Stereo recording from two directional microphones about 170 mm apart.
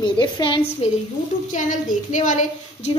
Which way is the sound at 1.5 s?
50° left (ahead or behind).